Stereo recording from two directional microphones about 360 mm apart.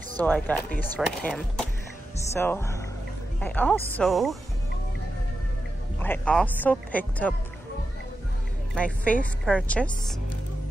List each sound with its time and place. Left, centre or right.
0.2 s speech: centre
6.0 s speech: centre
8.7 s speech: centre